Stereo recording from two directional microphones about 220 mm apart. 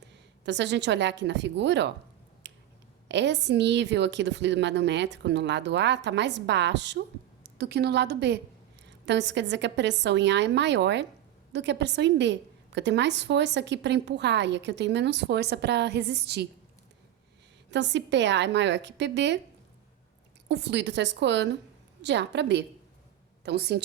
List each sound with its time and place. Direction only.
0.4 s a woman's voice: 55° right (ahead or behind)
2.4 s finger snapping: 55° right (ahead or behind)
3.1 s a woman's voice: 55° right (ahead or behind)
17.7 s a woman's voice: 55° right (ahead or behind)
20.5 s a woman's voice: 50° right (ahead or behind)